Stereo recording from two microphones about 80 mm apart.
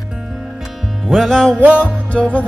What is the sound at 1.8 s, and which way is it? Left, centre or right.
Music, centre.